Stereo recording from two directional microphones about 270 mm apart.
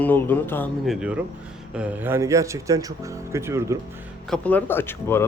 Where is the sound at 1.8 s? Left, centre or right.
Centre.